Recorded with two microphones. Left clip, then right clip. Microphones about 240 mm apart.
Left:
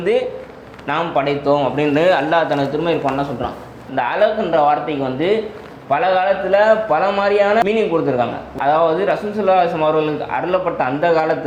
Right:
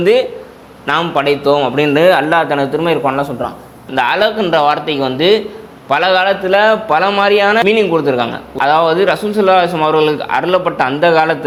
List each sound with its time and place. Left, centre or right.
0.0 s a man's voice: right